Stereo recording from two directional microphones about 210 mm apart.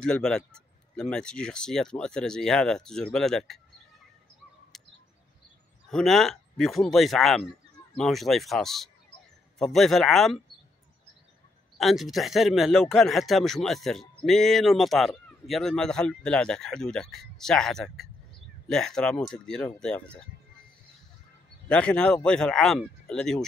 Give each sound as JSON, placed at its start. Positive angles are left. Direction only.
{"t": 0.0, "sound": "speech", "side_deg": 5}
{"t": 4.7, "sound": "bird", "side_deg": 0}
{"t": 5.9, "sound": "speech", "side_deg": 0}
{"t": 11.8, "sound": "speech", "side_deg": 0}
{"t": 21.6, "sound": "speech", "side_deg": 5}